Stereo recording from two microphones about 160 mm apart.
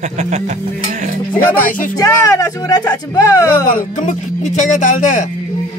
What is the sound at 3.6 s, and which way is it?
Music, 50° left (ahead or behind).